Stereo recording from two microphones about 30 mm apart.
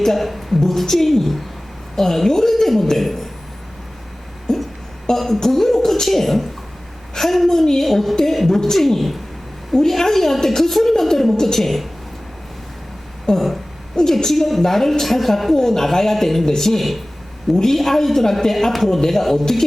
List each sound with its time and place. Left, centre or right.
0.0 s a woman's voice: centre
4.5 s music: centre
5.1 s a woman's voice: centre
13.3 s speech: left
14.3 s a woman's voice: centre